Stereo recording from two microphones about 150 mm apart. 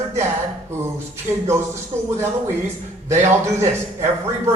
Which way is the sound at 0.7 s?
15° right (ahead or behind).